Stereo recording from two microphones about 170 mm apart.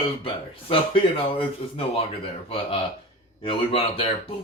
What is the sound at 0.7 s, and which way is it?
A man's voice, 30° left (ahead or behind).